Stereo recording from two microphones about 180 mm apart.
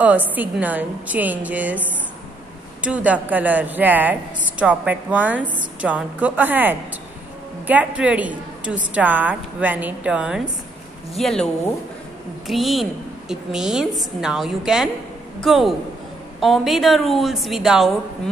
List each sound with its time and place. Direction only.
0.3 s a woman's voice: 10° right (ahead or behind)